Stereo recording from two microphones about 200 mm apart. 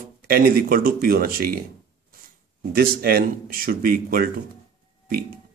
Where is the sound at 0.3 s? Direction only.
45° right (ahead or behind).